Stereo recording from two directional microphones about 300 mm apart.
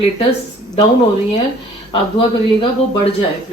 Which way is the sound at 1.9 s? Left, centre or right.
Centre.